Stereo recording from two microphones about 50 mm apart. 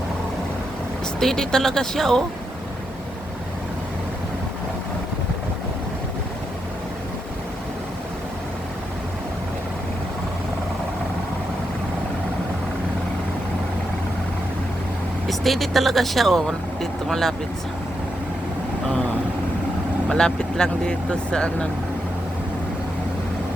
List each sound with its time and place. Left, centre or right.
1.2 s speech: centre
15.3 s speech: centre
20.1 s speech: centre